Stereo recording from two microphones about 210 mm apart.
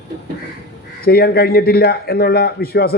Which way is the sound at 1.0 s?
50° left (ahead or behind).